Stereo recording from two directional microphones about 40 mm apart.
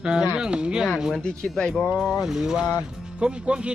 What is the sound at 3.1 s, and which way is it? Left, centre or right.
Speech, right.